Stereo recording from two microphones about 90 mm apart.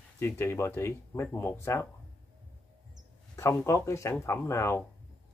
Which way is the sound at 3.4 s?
35° left (ahead or behind).